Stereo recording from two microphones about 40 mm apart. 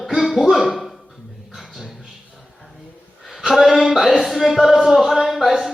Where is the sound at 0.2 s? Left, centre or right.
Centre.